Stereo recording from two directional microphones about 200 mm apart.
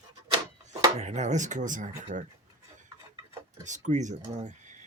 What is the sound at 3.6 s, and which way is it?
Speech, 35° right (ahead or behind).